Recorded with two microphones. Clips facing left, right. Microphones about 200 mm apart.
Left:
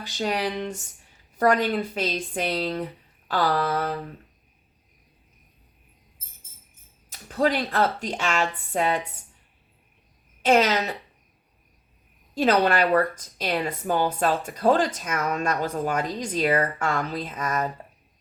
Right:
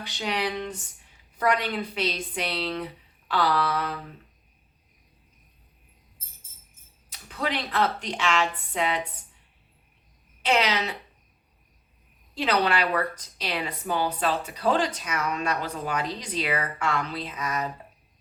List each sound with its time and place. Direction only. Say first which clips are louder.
0.2 s a woman's voice: left 3 dB; 50° left (ahead or behind)
7.1 s a woman's voice: left 7 dB; 50° left (ahead or behind)
10.4 s a woman's voice: left 5 dB; 45° left (ahead or behind)
12.3 s a woman's voice: left 4 dB; 45° left (ahead or behind)